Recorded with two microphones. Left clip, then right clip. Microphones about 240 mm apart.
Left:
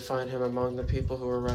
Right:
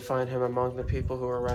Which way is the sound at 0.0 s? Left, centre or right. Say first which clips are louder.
Right 2 dB; right.